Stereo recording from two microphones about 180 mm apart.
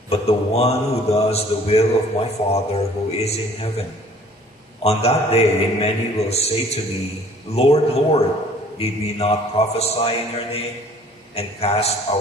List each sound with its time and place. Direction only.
0.1 s a man's voice: 35° left (ahead or behind)
4.8 s a man's voice: 35° left (ahead or behind)